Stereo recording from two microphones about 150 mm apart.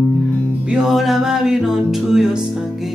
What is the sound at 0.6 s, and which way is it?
Music, 5° right (ahead or behind).